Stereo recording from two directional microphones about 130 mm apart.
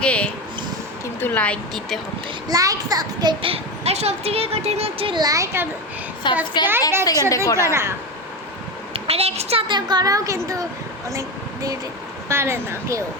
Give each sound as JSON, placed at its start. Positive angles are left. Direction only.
{"t": 0.0, "sound": "a sound", "side_deg": 10}
{"t": 1.2, "sound": "speech", "side_deg": 15}
{"t": 2.5, "sound": "a child's voice", "side_deg": -30}
{"t": 3.5, "sound": "speech", "side_deg": -55}
{"t": 5.2, "sound": "a child's voice", "side_deg": -25}
{"t": 6.3, "sound": "a woman's voice", "side_deg": 40}
{"t": 7.0, "sound": "a woman's voice", "side_deg": 30}
{"t": 7.6, "sound": "a child's voice", "side_deg": -20}
{"t": 8.9, "sound": "a child's voice", "side_deg": -50}
{"t": 9.6, "sound": "a child's voice", "side_deg": -35}